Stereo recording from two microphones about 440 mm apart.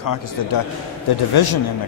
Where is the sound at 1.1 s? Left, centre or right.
Left.